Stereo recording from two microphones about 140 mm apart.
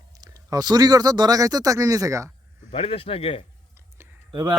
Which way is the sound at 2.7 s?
40° left (ahead or behind).